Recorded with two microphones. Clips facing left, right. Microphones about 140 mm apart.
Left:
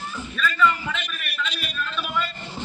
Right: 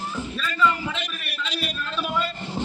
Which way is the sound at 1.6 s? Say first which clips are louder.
Right 2 dB; 30° right (ahead or behind).